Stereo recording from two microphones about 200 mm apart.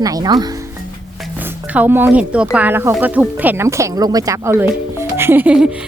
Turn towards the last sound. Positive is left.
turn(degrees=-5)  # may be behind; listen again after turning